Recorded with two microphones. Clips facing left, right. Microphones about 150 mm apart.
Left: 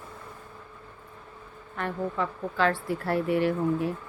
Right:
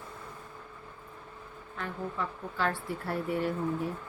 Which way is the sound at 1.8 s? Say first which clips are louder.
Left 6 dB; 90° left.